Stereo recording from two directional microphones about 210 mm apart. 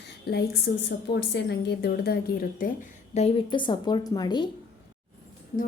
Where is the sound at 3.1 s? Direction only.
25° left (ahead or behind).